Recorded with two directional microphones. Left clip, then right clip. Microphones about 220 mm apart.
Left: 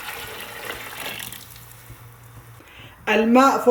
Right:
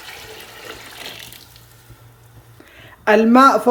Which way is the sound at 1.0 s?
10° right (ahead or behind).